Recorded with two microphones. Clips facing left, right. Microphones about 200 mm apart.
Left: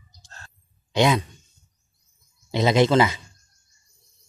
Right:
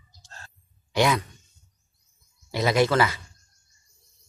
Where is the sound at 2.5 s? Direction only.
20° left (ahead or behind).